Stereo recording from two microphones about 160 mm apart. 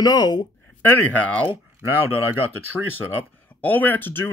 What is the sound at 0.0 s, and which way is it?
Speech, 25° left (ahead or behind).